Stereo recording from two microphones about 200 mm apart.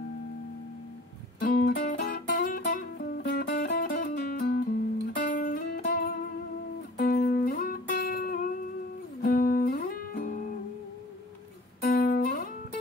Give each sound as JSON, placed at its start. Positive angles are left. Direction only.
{"t": 1.4, "sound": "music", "side_deg": 40}
{"t": 11.8, "sound": "music", "side_deg": 45}